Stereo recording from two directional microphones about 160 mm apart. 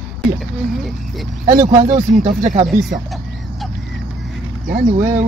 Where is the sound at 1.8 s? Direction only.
45° right (ahead or behind).